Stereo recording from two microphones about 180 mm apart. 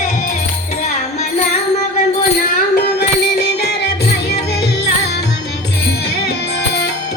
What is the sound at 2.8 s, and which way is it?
Music, 60° left (ahead or behind).